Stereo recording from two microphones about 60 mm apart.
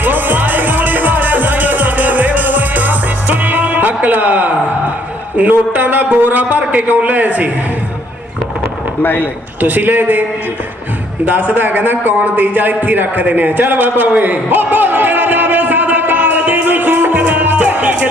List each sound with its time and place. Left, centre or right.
0.0 s music: right
5.4 s a man's voice: right
9.0 s a man's voice: left
9.6 s a man's voice: right
11.3 s a man's voice: right
14.1 s a sound: right